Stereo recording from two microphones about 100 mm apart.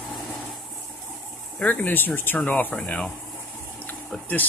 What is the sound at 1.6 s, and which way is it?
Speech, 15° left (ahead or behind).